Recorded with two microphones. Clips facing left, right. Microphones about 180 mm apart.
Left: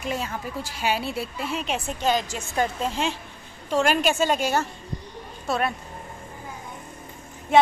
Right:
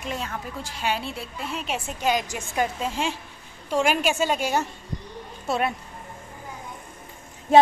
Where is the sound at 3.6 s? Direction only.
10° right (ahead or behind).